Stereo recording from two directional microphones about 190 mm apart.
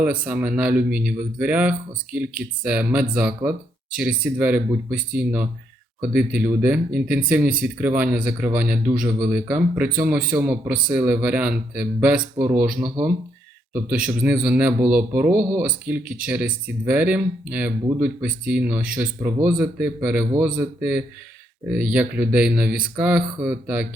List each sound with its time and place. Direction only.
0.0 s speech: 5° right (ahead or behind)
14.1 s speech: 5° right (ahead or behind)